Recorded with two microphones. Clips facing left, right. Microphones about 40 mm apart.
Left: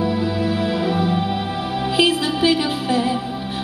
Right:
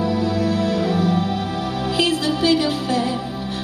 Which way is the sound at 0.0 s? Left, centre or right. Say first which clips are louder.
Even; centre.